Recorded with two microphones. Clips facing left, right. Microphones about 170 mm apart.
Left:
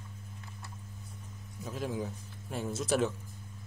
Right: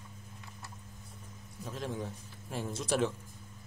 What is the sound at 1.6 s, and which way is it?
A man's voice, 5° left (ahead or behind).